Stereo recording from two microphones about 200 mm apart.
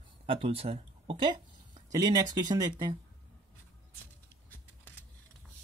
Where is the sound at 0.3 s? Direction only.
30° right (ahead or behind).